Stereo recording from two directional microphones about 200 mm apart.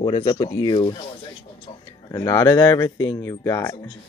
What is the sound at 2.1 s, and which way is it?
Speech, 15° left (ahead or behind).